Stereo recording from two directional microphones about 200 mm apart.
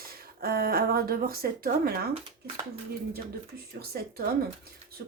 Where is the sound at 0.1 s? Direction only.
50° right (ahead or behind).